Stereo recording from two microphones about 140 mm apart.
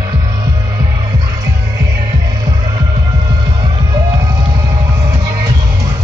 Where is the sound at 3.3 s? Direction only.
30° right (ahead or behind).